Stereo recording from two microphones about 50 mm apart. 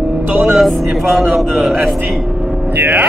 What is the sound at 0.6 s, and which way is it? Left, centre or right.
Speech, centre.